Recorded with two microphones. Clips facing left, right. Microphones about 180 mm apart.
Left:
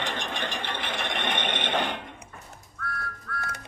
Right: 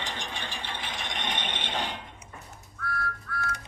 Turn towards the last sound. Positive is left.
turn(degrees=0)  # may be behind; listen again after turning